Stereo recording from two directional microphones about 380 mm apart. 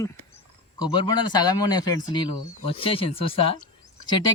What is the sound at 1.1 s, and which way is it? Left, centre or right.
Bird, centre.